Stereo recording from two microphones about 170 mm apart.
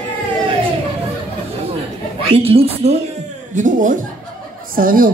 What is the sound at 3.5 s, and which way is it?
A woman's voice, 50° right (ahead or behind).